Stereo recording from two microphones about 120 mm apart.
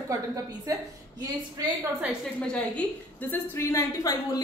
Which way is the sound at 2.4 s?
10° left (ahead or behind).